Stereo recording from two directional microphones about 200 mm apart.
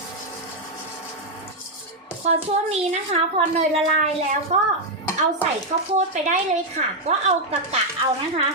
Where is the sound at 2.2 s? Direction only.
30° right (ahead or behind).